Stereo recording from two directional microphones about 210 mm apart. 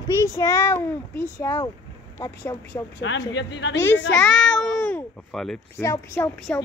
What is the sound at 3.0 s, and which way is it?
Speech, 60° left (ahead or behind).